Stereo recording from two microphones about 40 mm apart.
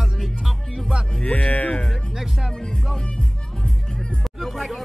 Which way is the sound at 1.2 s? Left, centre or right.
Left.